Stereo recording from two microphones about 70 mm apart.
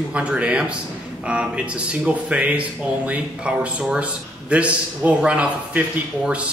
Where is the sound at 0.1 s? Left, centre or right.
Centre.